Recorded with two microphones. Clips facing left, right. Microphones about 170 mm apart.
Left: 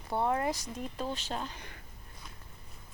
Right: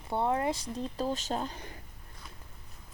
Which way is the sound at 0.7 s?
35° right (ahead or behind).